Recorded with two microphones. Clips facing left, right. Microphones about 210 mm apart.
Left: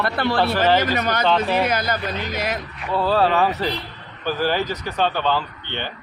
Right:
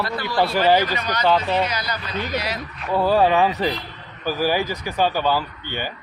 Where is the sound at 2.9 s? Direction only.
15° right (ahead or behind).